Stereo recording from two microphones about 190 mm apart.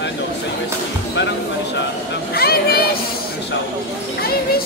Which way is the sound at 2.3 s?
55° left (ahead or behind).